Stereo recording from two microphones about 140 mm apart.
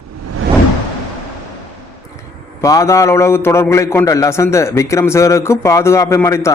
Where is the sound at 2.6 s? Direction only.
20° left (ahead or behind).